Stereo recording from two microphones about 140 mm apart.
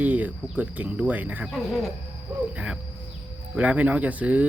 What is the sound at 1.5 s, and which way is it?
Speech, centre (ahead or behind).